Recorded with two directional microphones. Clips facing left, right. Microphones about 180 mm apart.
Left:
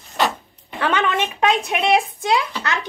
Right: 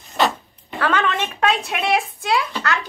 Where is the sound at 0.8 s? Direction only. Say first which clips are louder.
Left 1 dB; 20° left (ahead or behind).